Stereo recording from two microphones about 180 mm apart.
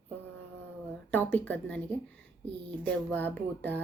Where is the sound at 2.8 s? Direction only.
10° left (ahead or behind).